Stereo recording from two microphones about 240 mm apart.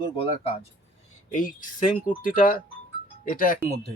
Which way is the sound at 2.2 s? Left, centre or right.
Left.